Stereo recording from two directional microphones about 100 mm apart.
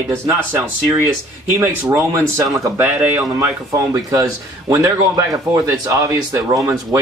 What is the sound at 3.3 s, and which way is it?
A man's voice, 30° right (ahead or behind).